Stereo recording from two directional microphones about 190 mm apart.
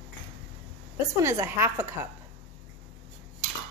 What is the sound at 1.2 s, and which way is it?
Speech, 15° right (ahead or behind).